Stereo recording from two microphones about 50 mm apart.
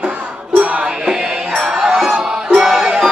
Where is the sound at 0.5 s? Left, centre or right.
Right.